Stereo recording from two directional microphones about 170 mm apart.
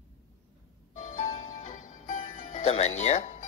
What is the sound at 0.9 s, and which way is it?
Music, 45° left (ahead or behind).